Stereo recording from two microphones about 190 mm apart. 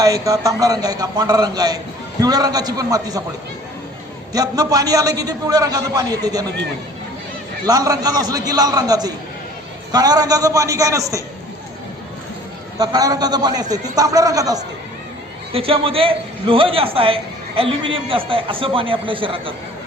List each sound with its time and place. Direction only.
0.0 s a man's voice: 20° right (ahead or behind)
4.3 s a man's voice: 20° right (ahead or behind)
7.7 s a man's voice: 20° right (ahead or behind)
12.8 s a man's voice: 20° right (ahead or behind)
15.5 s a man's voice: 30° right (ahead or behind)